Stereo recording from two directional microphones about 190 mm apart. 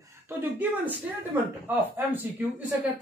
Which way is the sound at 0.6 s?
10° right (ahead or behind).